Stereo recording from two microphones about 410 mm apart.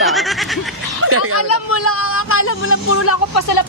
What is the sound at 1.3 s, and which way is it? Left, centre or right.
Speech, left.